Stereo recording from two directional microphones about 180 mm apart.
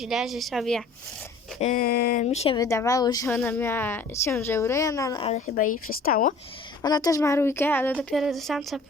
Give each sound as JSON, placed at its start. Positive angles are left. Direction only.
{"t": 0.0, "sound": "speech", "side_deg": 0}
{"t": 1.5, "sound": "speech", "side_deg": 40}
{"t": 1.8, "sound": "speech", "side_deg": 55}
{"t": 2.2, "sound": "speech", "side_deg": 35}
{"t": 2.6, "sound": "a woman's voice", "side_deg": 15}
{"t": 5.2, "sound": "speech", "side_deg": 45}
{"t": 6.8, "sound": "a woman's voice", "side_deg": 20}
{"t": 7.9, "sound": "speech", "side_deg": 0}